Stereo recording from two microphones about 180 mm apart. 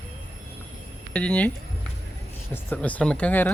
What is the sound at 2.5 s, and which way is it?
Speech, 10° left (ahead or behind).